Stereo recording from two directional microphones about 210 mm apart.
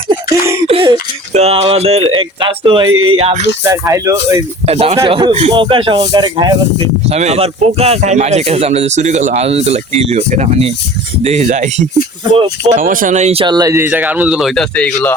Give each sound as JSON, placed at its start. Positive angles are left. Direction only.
{"t": 0.3, "sound": "speech", "side_deg": -15}
{"t": 0.7, "sound": "throat clearing", "side_deg": -25}
{"t": 1.3, "sound": "speech", "side_deg": -30}
{"t": 2.9, "sound": "speech", "side_deg": -75}
{"t": 3.2, "sound": "speech", "side_deg": -30}
{"t": 3.6, "sound": "speech", "side_deg": -15}
{"t": 4.6, "sound": "speech", "side_deg": -30}
{"t": 12.7, "sound": "speech", "side_deg": -40}